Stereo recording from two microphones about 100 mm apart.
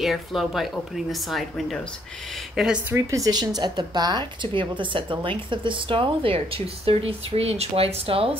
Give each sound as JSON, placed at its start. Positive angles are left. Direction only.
{"t": 0.0, "sound": "speech", "side_deg": 0}
{"t": 2.9, "sound": "speech", "side_deg": -35}